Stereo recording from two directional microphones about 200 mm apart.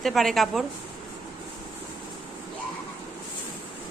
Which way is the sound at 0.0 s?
Centre (ahead or behind).